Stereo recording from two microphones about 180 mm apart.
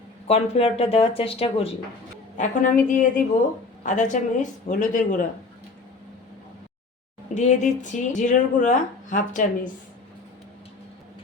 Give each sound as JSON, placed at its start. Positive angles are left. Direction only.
{"t": 0.3, "sound": "speech", "side_deg": 35}
{"t": 2.4, "sound": "a woman's voice", "side_deg": 45}
{"t": 7.3, "sound": "a woman's voice", "side_deg": 40}